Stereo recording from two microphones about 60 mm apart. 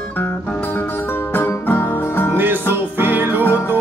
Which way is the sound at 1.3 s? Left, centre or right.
Left.